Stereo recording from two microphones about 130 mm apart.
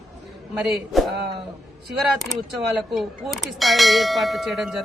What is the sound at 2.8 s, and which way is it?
Clang, centre (ahead or behind).